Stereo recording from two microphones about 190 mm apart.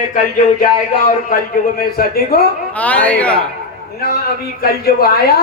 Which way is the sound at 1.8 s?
55° left (ahead or behind).